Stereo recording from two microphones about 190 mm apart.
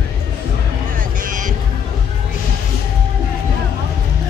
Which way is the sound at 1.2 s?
45° right (ahead or behind).